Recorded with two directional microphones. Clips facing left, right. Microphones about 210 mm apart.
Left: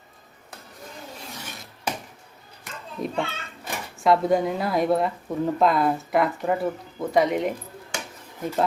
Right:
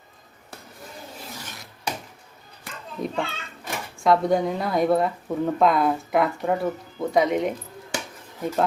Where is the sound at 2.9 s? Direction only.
Centre (ahead or behind).